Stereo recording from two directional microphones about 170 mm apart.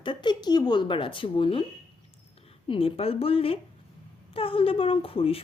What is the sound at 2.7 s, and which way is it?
A woman's voice, 35° left (ahead or behind).